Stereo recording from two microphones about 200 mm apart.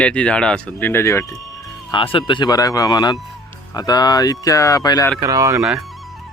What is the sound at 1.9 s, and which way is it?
Speech, 25° left (ahead or behind).